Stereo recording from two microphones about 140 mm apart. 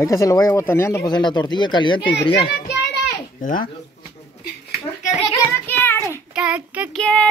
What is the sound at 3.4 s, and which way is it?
Speech, 80° left.